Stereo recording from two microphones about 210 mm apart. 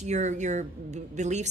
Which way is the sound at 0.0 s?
35° right (ahead or behind).